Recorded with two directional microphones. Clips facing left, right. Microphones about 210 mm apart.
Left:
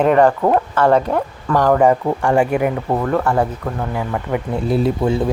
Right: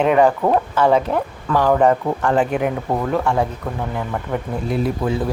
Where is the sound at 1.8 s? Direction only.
10° left (ahead or behind); by 3.8 s 10° right (ahead or behind).